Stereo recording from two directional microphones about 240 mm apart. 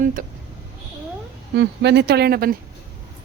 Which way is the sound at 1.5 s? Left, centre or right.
Right.